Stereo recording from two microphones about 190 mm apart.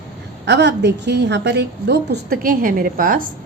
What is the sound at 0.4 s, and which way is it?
A woman's voice, 65° right (ahead or behind).